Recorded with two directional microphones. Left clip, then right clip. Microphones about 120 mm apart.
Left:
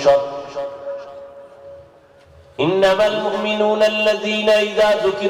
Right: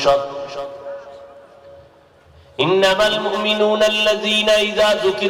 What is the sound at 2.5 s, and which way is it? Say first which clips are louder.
A man's voice: even; 40° right (ahead or behind).